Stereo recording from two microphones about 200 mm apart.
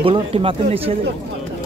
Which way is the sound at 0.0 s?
25° right (ahead or behind).